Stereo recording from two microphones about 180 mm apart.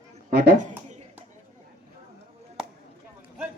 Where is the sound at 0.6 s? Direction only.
40° right (ahead or behind).